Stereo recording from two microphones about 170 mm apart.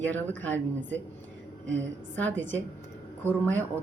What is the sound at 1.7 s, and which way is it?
Speech, 90° right.